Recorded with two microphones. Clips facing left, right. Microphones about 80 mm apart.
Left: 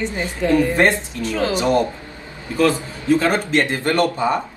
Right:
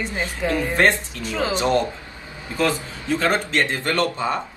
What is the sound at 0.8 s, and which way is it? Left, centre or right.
Speech, left.